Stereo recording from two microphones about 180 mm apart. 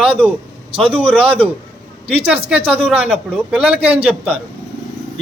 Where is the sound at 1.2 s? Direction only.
30° right (ahead or behind).